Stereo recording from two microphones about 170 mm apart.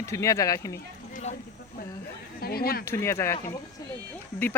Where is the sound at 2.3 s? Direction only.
65° left (ahead or behind).